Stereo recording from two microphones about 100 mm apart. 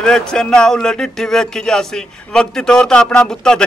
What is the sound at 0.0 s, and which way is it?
Speech, 5° left (ahead or behind).